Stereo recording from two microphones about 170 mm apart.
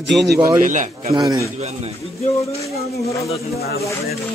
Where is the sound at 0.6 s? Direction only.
45° right (ahead or behind).